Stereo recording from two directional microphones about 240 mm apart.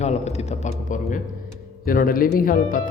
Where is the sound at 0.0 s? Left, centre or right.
Left.